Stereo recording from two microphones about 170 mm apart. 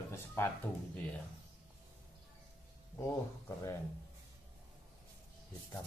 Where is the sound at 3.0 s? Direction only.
15° left (ahead or behind).